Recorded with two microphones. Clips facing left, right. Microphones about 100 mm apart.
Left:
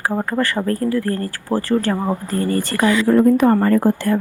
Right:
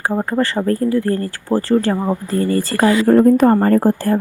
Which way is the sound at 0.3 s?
25° right (ahead or behind).